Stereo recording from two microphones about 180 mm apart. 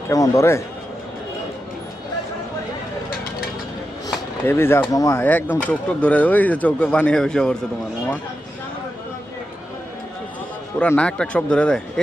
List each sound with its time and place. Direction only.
0.1 s speech: 15° left (ahead or behind)
4.4 s speech: 15° left (ahead or behind)
10.8 s speech: 5° left (ahead or behind)